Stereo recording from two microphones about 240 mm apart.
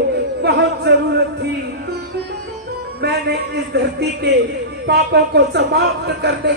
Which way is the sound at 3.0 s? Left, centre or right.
Right.